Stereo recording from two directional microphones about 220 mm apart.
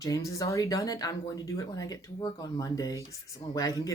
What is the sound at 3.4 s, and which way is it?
Speech, 25° left (ahead or behind).